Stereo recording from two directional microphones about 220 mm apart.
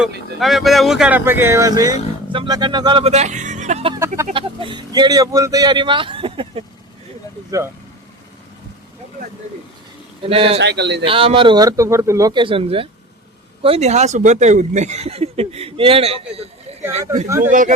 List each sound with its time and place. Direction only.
0.3 s speech: centre (ahead or behind); by 6.7 s 25° right (ahead or behind)
10.2 s speech: 25° right (ahead or behind)
10.6 s speech: 50° right (ahead or behind)
11.0 s speech: 25° right (ahead or behind)
17.2 s speech: 15° right (ahead or behind)